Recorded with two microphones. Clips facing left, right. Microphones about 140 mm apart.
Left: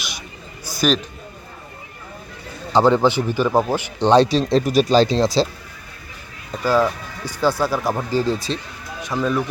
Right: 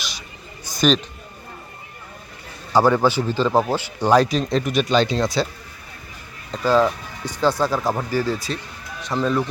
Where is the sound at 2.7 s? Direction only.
20° left (ahead or behind).